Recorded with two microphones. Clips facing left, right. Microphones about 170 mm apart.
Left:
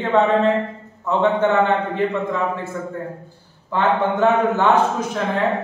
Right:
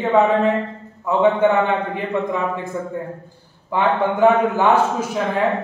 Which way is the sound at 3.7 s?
10° right (ahead or behind).